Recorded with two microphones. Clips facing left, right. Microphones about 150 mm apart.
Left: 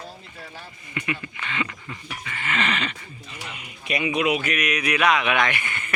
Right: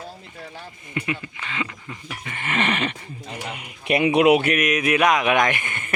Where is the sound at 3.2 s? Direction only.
50° right (ahead or behind).